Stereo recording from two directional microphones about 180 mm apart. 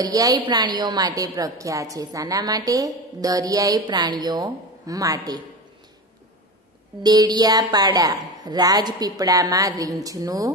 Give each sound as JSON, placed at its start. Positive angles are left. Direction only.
{"t": 0.0, "sound": "a woman's voice", "side_deg": -20}
{"t": 7.0, "sound": "a woman's voice", "side_deg": -20}